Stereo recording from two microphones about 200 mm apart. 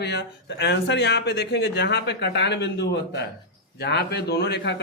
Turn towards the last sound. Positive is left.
turn(degrees=55)  # may be behind; listen again after turning